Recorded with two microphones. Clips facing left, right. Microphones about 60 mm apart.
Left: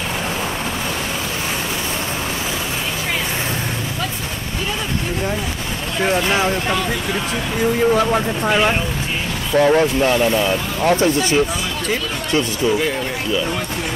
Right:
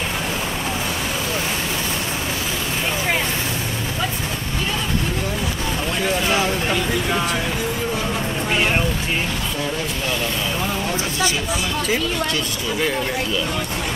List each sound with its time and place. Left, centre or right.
6.0 s speech: left
9.6 s speech: left